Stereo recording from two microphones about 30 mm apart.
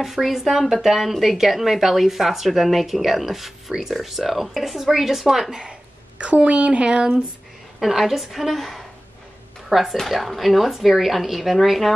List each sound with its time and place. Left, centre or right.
0.0 s speech: centre
5.7 s a sound: right
6.9 s speech: right
8.0 s speech: centre